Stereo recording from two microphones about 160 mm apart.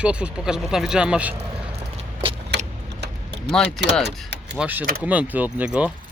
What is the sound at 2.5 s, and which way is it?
Tick-tock, 90° right.